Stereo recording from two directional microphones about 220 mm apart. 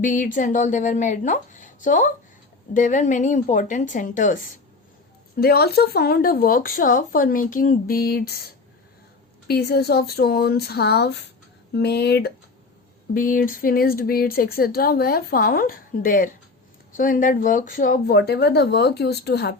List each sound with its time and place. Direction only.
0.0 s speech: 35° left (ahead or behind)
9.5 s speech: 45° left (ahead or behind)